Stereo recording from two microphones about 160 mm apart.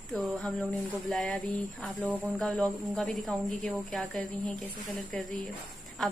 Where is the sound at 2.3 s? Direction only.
10° left (ahead or behind).